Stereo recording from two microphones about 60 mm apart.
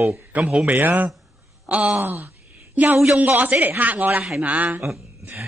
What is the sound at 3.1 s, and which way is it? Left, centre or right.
A woman's voice, right.